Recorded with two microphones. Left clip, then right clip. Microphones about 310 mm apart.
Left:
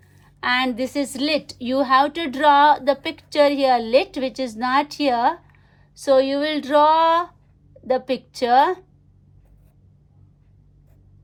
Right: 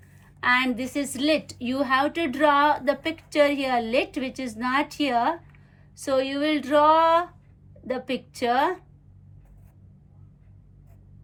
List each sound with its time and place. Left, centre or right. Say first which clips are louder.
0.3 s a woman's voice: left 2 dB; left